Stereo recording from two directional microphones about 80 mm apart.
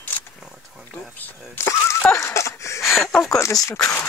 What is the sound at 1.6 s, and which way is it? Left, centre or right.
Speech, left.